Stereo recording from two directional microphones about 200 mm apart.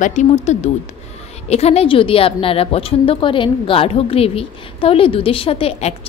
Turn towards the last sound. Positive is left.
turn(degrees=30)  # may be behind; listen again after turning